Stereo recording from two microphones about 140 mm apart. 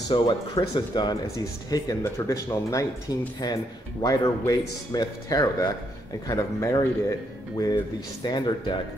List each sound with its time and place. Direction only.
0.1 s speech: 30° left (ahead or behind)